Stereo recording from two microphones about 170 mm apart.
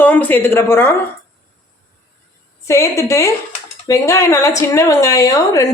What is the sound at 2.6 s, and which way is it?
A woman's voice, 15° left (ahead or behind).